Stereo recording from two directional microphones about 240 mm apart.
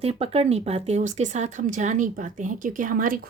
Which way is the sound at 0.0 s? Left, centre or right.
Right.